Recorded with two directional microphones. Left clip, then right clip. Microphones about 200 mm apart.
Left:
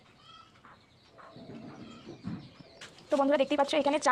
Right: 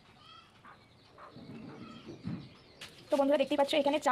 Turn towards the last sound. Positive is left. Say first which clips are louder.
# left 2 dB
turn(degrees=15)  # may be behind; listen again after turning